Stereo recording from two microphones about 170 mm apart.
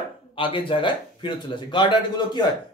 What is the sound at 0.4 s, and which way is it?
Speech, 30° left (ahead or behind).